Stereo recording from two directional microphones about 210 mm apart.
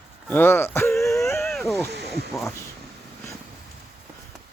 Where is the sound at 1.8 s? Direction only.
50° right (ahead or behind).